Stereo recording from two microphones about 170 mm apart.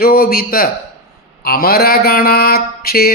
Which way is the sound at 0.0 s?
60° left (ahead or behind).